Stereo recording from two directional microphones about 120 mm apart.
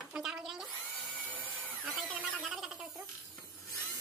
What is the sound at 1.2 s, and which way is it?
Drill, 15° right (ahead or behind).